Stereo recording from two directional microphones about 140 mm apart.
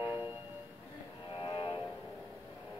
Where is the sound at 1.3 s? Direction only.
35° left (ahead or behind).